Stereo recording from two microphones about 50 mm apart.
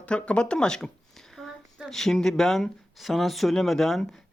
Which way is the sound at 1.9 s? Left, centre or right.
Centre.